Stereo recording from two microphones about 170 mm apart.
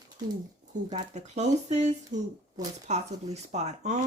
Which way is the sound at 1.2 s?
40° right (ahead or behind).